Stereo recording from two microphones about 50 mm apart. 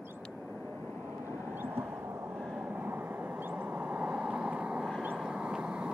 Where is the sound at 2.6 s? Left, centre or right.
Right.